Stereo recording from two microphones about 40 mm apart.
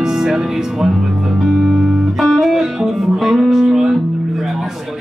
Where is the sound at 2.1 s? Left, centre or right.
Centre.